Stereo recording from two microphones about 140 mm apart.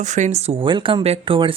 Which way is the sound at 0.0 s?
60° right (ahead or behind).